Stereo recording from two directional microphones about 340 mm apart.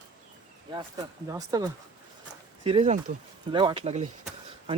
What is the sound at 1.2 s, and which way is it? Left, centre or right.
Speech, centre.